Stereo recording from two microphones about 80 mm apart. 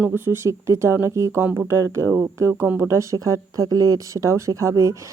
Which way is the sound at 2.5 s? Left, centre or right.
Right.